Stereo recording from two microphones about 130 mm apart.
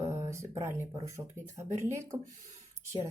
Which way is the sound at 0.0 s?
20° right (ahead or behind).